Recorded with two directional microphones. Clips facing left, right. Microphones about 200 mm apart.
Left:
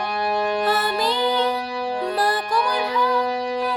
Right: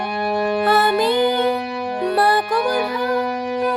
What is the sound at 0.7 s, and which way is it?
Music, 60° right (ahead or behind).